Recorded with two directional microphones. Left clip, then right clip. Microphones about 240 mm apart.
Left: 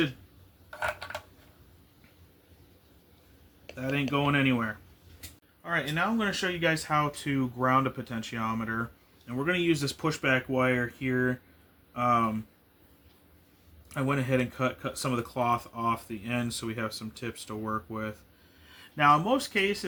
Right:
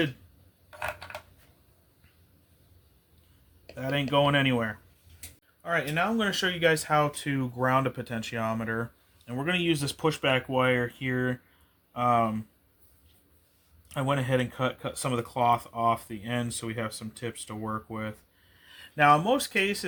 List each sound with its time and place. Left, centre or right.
0.7 s a sound: centre
3.8 s speech: right
5.6 s speech: right
13.8 s speech: right